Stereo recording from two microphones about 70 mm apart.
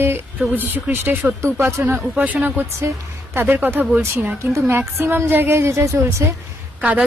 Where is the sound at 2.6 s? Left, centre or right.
Right.